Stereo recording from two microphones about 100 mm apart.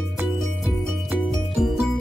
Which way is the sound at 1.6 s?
Centre (ahead or behind).